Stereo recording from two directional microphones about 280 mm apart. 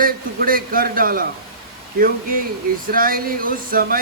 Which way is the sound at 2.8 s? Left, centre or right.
Right.